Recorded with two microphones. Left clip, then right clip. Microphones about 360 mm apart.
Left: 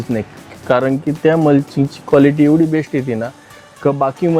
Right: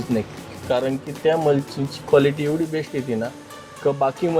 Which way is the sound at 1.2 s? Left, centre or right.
Left.